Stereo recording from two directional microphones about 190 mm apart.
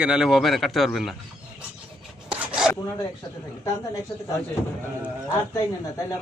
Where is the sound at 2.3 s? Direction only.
5° right (ahead or behind).